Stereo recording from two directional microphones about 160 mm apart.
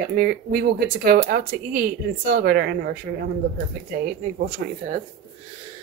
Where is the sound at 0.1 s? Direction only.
70° right (ahead or behind).